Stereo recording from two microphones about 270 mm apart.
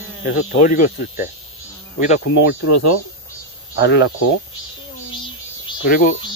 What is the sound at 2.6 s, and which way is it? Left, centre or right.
Speech, left.